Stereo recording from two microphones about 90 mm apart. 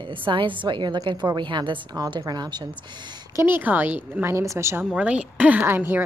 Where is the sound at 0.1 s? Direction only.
70° right (ahead or behind).